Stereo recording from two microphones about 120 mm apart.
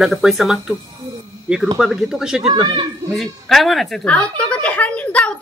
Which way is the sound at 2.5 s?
35° right (ahead or behind).